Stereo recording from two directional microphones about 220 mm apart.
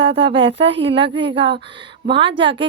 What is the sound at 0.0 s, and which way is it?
Speech, 25° right (ahead or behind).